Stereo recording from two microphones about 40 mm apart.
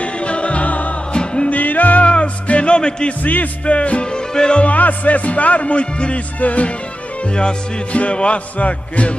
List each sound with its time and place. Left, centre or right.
0.0 s music: left
1.1 s music: left
1.5 s music: left
2.0 s music: left
4.6 s music: left